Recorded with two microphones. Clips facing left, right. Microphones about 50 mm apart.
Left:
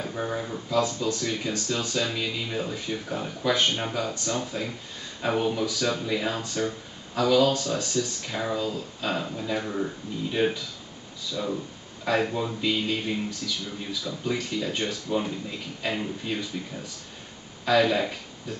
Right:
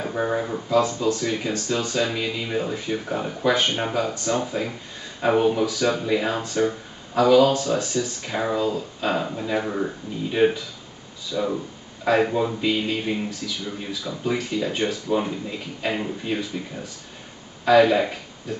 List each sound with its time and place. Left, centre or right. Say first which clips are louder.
0.0 s speech: right 6 dB; right
0.7 s speech: right 4 dB; centre
11.3 s a sound: right 5 dB; centre
12.1 s speech: right 5 dB; centre